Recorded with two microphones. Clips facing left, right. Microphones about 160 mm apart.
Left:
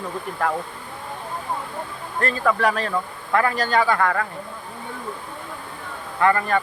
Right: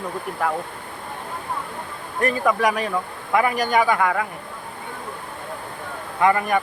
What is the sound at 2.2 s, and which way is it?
Speech, 15° right (ahead or behind).